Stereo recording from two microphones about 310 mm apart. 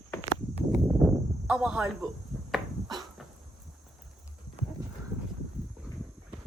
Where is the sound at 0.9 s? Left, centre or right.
Centre.